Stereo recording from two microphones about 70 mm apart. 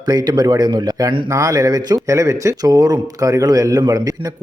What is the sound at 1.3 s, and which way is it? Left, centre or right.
Speech, right.